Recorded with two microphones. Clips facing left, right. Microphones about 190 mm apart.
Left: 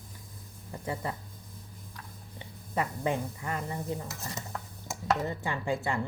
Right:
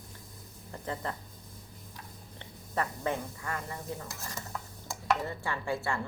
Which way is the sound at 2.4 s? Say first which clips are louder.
Left 1 dB; 15° left (ahead or behind).